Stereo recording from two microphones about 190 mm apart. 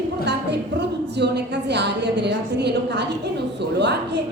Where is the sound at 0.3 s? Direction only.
65° right (ahead or behind).